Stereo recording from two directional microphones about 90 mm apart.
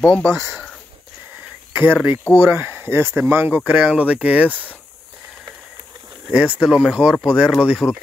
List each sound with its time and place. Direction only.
0.0 s speech: 10° left (ahead or behind)
1.7 s a sound: 25° right (ahead or behind)
2.3 s speech: 25° right (ahead or behind)
6.3 s speech: 10° right (ahead or behind)
7.8 s speech: 30° left (ahead or behind)